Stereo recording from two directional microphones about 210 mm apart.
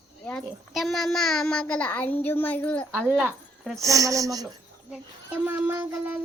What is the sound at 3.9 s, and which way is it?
Speech, 15° right (ahead or behind).